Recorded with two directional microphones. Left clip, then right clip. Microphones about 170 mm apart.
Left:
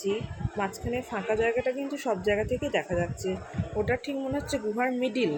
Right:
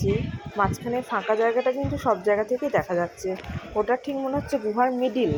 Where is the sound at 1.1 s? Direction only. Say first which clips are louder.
Right 5 dB; 5° right (ahead or behind).